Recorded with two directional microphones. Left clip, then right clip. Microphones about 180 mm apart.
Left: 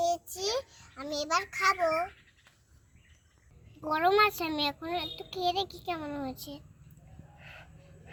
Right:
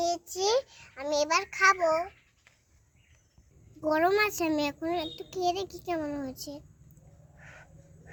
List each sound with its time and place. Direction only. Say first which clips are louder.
0.3 s a sound: right 6 dB; 35° right (ahead or behind)
0.8 s a child's voice: right 7 dB; 45° right (ahead or behind)
3.8 s a child's voice: even; 70° right (ahead or behind)